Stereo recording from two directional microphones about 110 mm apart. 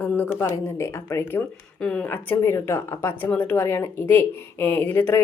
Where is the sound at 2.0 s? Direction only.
20° left (ahead or behind).